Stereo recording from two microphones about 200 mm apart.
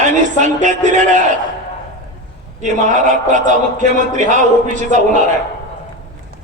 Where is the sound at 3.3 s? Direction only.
40° right (ahead or behind).